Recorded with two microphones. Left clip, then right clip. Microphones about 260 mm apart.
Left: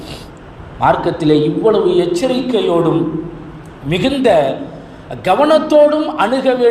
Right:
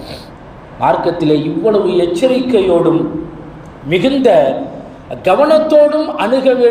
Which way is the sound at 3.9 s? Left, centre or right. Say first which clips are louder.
Right 2 dB; left.